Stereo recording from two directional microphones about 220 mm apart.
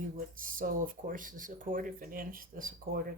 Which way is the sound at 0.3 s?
40° right (ahead or behind).